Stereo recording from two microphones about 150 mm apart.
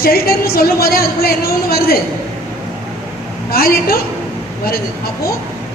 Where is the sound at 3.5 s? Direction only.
85° left.